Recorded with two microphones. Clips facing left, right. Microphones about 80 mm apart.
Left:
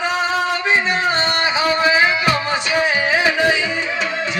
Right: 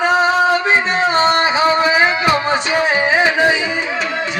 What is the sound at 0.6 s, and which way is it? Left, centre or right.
Music, right.